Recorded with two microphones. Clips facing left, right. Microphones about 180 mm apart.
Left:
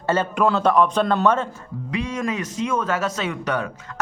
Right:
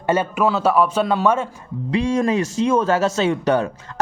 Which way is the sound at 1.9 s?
30° right (ahead or behind).